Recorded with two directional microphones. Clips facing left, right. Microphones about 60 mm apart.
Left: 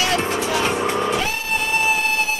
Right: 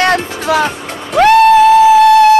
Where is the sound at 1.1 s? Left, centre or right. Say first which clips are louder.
Right 17 dB; right.